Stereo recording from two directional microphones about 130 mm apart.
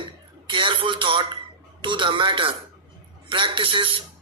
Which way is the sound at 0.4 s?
40° right (ahead or behind).